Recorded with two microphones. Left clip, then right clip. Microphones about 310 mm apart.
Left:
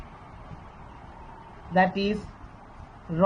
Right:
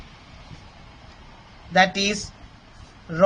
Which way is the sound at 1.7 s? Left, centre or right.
Right.